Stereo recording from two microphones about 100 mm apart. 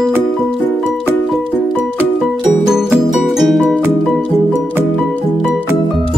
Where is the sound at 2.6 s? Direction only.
5° right (ahead or behind).